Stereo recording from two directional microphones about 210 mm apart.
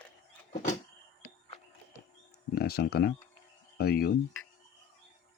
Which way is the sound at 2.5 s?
50° left (ahead or behind).